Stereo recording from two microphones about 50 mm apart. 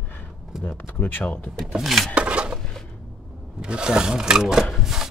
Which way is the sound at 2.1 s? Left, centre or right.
Right.